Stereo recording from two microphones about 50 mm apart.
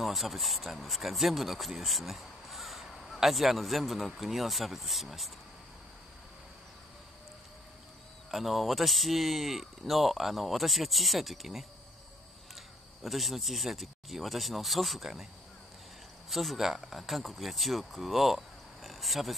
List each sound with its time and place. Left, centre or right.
0.0 s speech: centre
8.3 s speech: centre
13.0 s speech: centre
16.3 s speech: centre